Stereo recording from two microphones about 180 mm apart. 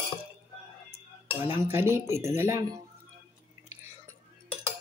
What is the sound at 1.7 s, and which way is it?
A woman's voice, 15° right (ahead or behind).